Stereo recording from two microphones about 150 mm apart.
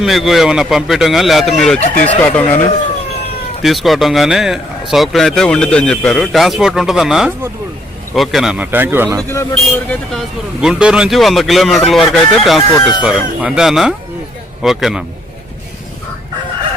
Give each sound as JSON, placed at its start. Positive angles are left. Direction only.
{"t": 0.0, "sound": "speech", "side_deg": 0}
{"t": 1.8, "sound": "speech", "side_deg": 55}
{"t": 2.2, "sound": "speech", "side_deg": 10}
{"t": 3.6, "sound": "speech", "side_deg": 0}
{"t": 8.6, "sound": "speech", "side_deg": -15}
{"t": 9.3, "sound": "speech", "side_deg": 20}
{"t": 10.1, "sound": "speech", "side_deg": 0}
{"t": 12.5, "sound": "speech", "side_deg": 35}
{"t": 13.0, "sound": "speech", "side_deg": -5}